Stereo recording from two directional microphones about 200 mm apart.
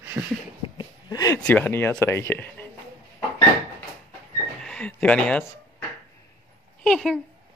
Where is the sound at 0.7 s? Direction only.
20° left (ahead or behind).